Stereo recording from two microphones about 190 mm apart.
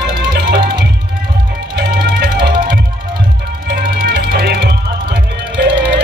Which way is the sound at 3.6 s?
50° right (ahead or behind).